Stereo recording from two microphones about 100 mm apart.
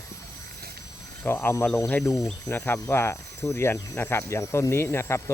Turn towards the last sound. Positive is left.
turn(degrees=25)  # may be behind; listen again after turning